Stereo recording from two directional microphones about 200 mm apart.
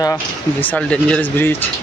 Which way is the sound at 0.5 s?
5° left (ahead or behind).